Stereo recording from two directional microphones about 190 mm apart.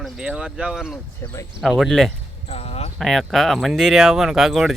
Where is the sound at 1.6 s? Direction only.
Centre (ahead or behind).